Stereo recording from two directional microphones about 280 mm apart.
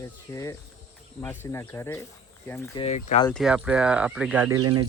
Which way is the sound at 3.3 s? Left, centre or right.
Centre.